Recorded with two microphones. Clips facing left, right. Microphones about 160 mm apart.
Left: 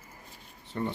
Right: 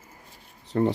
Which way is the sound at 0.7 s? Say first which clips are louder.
Right 9 dB; 85° right.